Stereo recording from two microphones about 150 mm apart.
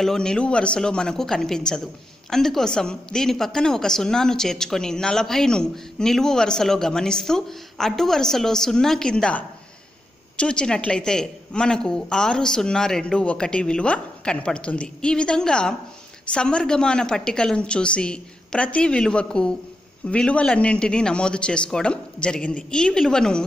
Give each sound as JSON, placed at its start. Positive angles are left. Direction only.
{"t": 0.0, "sound": "a woman's voice", "side_deg": 5}